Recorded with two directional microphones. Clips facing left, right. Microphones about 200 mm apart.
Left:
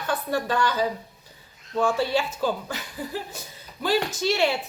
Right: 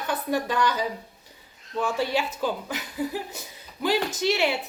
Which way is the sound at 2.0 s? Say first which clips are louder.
Left 2 dB; 15° right (ahead or behind).